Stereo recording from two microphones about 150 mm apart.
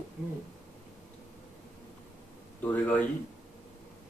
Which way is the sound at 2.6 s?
10° left (ahead or behind).